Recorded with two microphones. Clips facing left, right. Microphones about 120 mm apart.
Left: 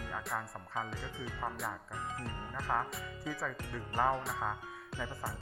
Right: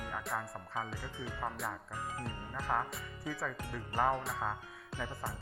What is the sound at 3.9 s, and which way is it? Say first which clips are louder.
Speech: even; 15° right (ahead or behind).